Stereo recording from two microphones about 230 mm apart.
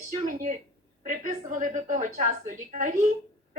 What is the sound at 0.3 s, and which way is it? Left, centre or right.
A woman's voice, right.